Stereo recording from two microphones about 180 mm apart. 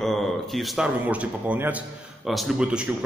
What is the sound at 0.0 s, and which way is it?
A man's voice, centre (ahead or behind).